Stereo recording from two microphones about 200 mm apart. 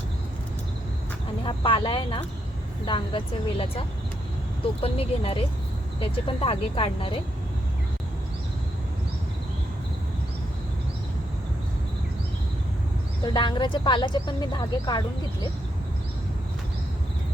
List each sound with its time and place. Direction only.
1.5 s speech: 25° left (ahead or behind)
13.2 s speech: 20° left (ahead or behind)